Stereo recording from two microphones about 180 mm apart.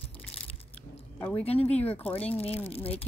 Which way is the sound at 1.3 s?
35° left (ahead or behind).